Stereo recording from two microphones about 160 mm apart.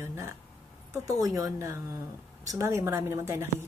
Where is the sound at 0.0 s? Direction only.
15° right (ahead or behind).